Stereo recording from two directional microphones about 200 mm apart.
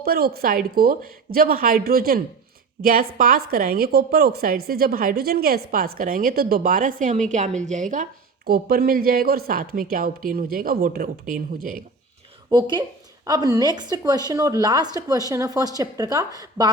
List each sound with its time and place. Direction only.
0.0 s a woman's voice: 50° right (ahead or behind)
8.4 s a woman's voice: 50° right (ahead or behind)
12.5 s a woman's voice: 20° right (ahead or behind)